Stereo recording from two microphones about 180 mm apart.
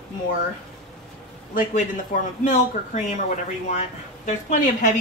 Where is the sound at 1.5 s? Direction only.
45° left (ahead or behind).